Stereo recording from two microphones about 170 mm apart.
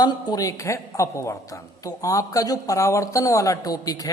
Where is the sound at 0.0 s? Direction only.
25° left (ahead or behind).